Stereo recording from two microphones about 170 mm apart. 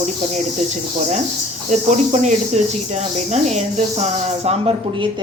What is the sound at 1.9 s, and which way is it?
Speech, 45° right (ahead or behind).